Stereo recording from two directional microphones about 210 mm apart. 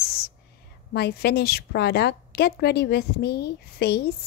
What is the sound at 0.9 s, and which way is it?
A woman's voice, 50° left (ahead or behind).